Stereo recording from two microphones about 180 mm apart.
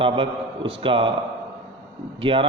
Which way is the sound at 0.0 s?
30° right (ahead or behind).